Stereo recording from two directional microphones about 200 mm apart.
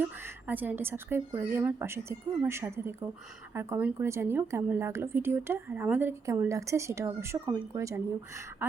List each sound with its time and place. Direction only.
0.0 s a woman's voice: 10° right (ahead or behind)